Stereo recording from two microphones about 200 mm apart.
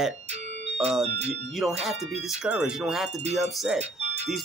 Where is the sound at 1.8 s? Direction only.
Centre (ahead or behind).